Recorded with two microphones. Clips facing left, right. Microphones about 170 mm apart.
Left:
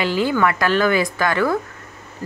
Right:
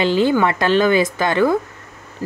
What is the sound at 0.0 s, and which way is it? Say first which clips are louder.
Speech: right 3 dB; 25° right (ahead or behind).